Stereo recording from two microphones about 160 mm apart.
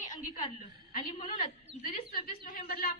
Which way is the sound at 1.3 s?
35° left (ahead or behind).